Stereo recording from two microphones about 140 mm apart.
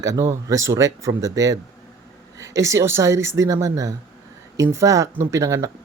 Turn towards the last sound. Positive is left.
turn(degrees=-20)  # may be behind; listen again after turning